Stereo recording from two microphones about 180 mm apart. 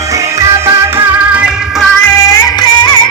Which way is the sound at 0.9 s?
10° right (ahead or behind).